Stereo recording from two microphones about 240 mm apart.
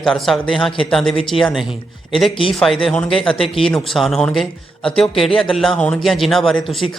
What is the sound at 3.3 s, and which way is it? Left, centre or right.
Speech, left.